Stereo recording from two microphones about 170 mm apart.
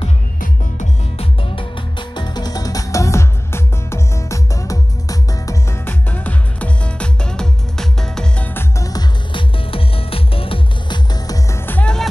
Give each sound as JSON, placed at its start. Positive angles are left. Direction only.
{"t": 1.1, "sound": "music", "side_deg": 30}